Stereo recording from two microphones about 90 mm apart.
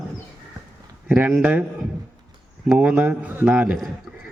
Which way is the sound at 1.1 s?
20° right (ahead or behind).